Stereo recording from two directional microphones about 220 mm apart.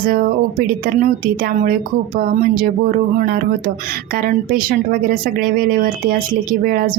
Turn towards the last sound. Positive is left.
turn(degrees=-40)  # may be behind; listen again after turning